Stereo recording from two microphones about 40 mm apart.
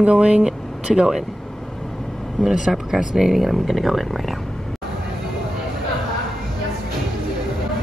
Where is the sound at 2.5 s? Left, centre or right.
Centre.